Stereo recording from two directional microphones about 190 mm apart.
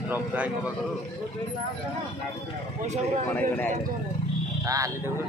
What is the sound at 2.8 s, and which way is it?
Speech, 35° right (ahead or behind).